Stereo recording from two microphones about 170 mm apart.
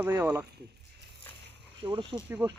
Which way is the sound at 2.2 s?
20° right (ahead or behind).